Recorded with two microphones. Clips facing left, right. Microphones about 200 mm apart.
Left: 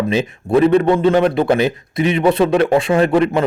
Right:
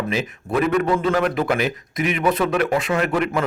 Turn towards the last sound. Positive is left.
turn(degrees=30)  # may be behind; listen again after turning